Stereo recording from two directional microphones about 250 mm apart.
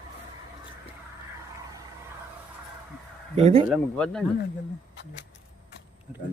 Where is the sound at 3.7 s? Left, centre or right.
Centre.